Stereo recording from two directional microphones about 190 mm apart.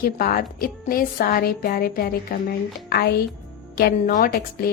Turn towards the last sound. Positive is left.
turn(degrees=45)  # may be behind; listen again after turning